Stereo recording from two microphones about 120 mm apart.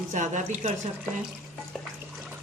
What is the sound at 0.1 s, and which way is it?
Speech, 90° right.